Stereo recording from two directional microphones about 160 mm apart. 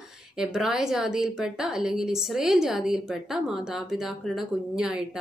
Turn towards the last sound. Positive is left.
turn(degrees=-5)  # may be behind; listen again after turning